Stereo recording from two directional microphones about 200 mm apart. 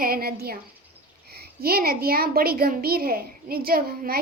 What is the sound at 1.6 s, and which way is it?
A child's voice, 50° right (ahead or behind).